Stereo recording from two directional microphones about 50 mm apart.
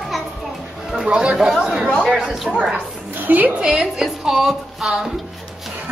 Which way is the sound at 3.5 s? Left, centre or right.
Right.